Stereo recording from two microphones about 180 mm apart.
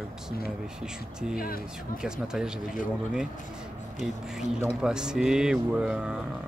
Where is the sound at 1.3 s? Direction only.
55° left (ahead or behind).